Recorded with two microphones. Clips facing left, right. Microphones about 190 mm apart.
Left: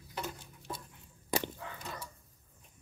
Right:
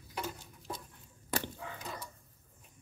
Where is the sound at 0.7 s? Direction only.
Centre (ahead or behind).